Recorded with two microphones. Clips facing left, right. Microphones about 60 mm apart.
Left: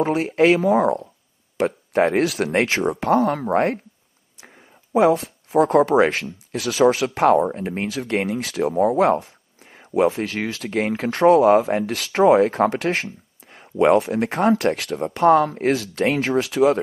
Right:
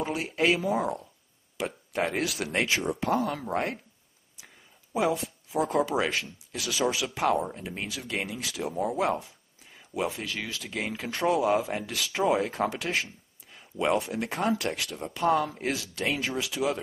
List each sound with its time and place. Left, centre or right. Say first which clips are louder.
0.0 s speech: left 10 dB; left